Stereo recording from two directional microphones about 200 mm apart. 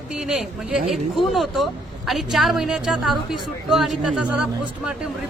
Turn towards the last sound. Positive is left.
turn(degrees=-5)  # may be behind; listen again after turning